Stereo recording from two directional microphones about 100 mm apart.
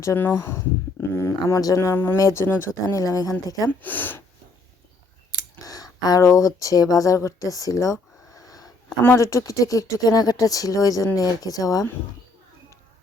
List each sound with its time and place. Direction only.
0.0 s speech: 25° left (ahead or behind)
3.8 s speech: 20° left (ahead or behind)
5.6 s speech: 40° left (ahead or behind)
8.3 s sniff: 35° left (ahead or behind)
9.0 s speech: 30° left (ahead or behind)